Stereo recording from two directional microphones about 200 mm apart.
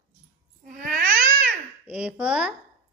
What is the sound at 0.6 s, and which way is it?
Babbling, 40° right (ahead or behind).